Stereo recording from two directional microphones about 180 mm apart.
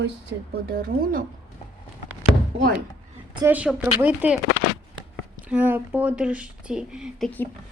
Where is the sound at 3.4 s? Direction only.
5° right (ahead or behind).